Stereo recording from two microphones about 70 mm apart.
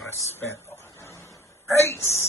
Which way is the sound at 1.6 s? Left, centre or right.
Left.